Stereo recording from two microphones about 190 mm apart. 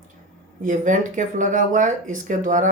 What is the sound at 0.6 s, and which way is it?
Speech, 45° right (ahead or behind).